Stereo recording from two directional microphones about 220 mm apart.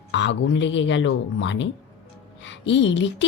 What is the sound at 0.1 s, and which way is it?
Speech, 55° left (ahead or behind).